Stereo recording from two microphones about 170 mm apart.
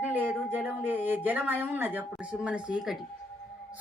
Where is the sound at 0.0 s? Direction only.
10° right (ahead or behind).